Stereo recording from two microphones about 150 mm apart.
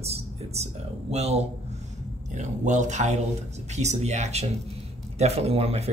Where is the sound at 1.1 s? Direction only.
45° right (ahead or behind).